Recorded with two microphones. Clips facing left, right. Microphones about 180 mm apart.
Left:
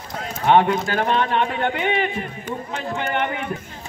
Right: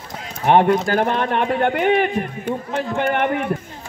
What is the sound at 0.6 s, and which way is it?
A man's voice, 50° right (ahead or behind).